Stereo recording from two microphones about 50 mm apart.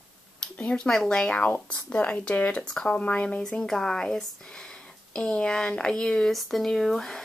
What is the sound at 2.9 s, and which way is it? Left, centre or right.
Speech, left.